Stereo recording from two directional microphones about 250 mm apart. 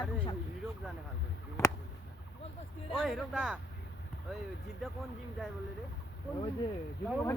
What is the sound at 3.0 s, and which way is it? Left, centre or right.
Speech, centre.